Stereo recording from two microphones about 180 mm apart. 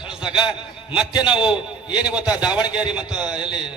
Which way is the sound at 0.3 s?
25° left (ahead or behind).